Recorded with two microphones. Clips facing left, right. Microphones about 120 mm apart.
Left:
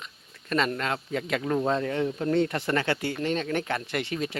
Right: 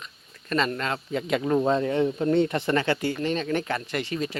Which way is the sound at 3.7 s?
10° left (ahead or behind).